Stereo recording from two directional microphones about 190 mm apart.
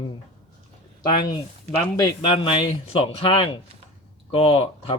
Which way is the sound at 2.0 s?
25° left (ahead or behind).